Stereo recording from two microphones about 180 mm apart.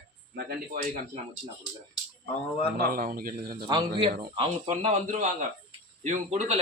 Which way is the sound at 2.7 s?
55° right (ahead or behind).